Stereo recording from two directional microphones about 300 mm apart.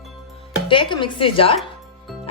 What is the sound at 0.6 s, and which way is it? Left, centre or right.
Speech, centre.